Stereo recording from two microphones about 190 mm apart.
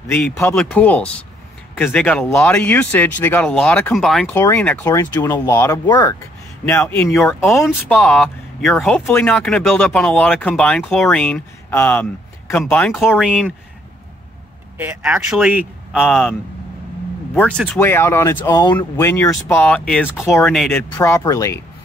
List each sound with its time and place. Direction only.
0.1 s speech: 10° left (ahead or behind)
7.4 s speech: centre (ahead or behind)
14.8 s speech: 10° right (ahead or behind)
15.9 s speech: 5° left (ahead or behind)
21.0 s speech: 15° left (ahead or behind)